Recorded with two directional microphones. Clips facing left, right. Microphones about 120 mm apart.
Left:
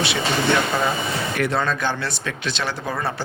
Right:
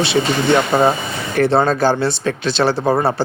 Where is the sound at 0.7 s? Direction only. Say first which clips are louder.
Right 8 dB; 40° right (ahead or behind).